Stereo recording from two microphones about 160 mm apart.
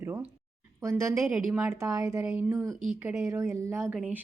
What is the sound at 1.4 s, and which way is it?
Speech, 5° right (ahead or behind).